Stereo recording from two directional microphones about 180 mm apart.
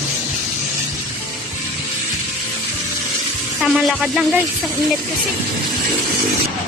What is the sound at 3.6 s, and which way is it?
Speech, centre (ahead or behind).